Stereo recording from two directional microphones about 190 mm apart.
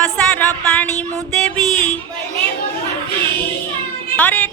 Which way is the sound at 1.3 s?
5° left (ahead or behind).